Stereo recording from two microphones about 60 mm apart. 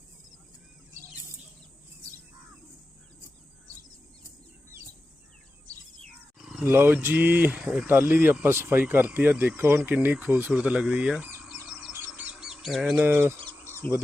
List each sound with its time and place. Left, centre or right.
6.4 s a sound: centre
6.7 s speech: right
7.6 s speech: centre
7.9 s speech: right
8.8 s speech: right
9.6 s speech: right; by 11.3 s centre
12.1 s bird: right
12.6 s speech: centre
13.0 s speech: right